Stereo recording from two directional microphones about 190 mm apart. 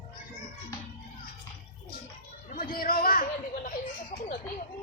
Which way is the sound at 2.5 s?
45° left (ahead or behind).